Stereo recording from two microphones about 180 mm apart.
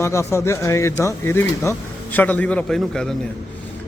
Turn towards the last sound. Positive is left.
turn(degrees=5)  # may be behind; listen again after turning